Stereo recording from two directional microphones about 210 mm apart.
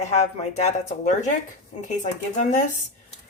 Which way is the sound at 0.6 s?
35° left (ahead or behind).